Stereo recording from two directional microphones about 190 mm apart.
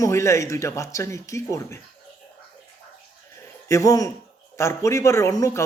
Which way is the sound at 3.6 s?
15° left (ahead or behind).